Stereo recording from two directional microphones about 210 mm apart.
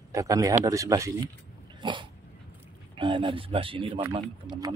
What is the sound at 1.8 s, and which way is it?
Dog, 25° right (ahead or behind).